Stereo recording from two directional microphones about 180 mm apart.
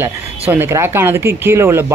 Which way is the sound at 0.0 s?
10° right (ahead or behind).